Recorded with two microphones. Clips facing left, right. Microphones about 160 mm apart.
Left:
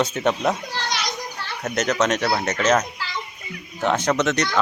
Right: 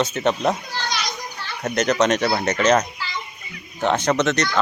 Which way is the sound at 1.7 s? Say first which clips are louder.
Right 3 dB; 5° left (ahead or behind).